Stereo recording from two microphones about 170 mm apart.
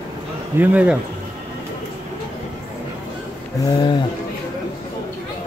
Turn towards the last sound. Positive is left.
turn(degrees=25)  # may be behind; listen again after turning